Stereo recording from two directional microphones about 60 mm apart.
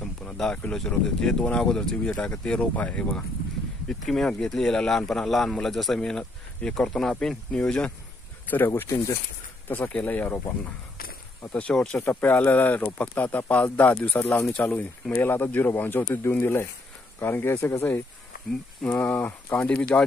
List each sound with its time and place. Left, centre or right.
0.0 s a sound: centre
0.7 s speech: centre
2.7 s speech: left
4.0 s speech: centre
8.5 s speech: left
9.7 s speech: left
11.5 s speech: centre
12.0 s speech: left
18.8 s speech: left